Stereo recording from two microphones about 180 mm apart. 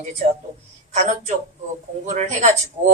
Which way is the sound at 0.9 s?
40° right (ahead or behind).